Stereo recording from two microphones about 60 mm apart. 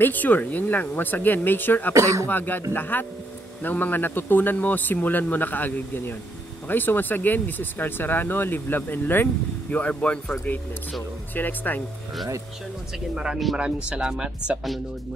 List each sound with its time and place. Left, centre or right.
0.0 s speech: left
9.7 s speech: left
11.3 s speech: left
13.1 s speech: centre
13.6 s speech: centre